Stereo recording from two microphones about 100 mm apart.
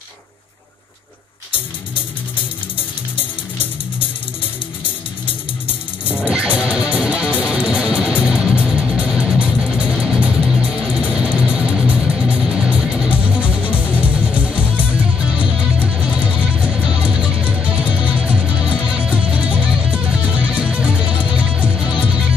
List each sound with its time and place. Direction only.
6.1 s music: 10° right (ahead or behind)